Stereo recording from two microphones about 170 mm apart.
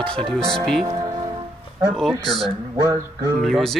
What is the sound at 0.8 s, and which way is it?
Speech, 20° right (ahead or behind).